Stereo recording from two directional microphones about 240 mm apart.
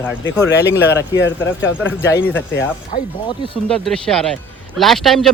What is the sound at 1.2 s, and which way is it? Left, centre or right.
Speech, left.